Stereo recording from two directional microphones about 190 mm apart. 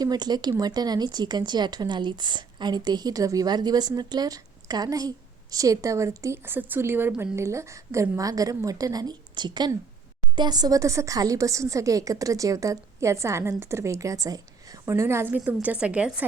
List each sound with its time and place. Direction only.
0.0 s a woman's voice: 20° right (ahead or behind)